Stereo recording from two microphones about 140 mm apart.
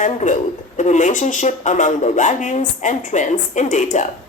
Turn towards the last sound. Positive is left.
turn(degrees=60)  # may be behind; listen again after turning